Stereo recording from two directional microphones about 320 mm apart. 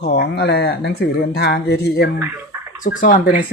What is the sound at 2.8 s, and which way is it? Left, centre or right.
Speech, left.